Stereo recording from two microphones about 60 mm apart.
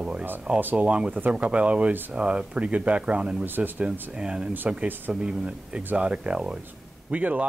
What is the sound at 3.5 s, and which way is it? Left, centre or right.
Speech, right.